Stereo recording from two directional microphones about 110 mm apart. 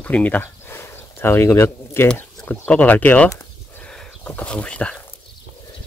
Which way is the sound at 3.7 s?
10° left (ahead or behind).